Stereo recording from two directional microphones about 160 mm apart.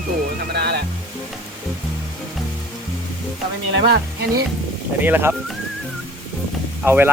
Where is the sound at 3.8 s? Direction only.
75° right (ahead or behind).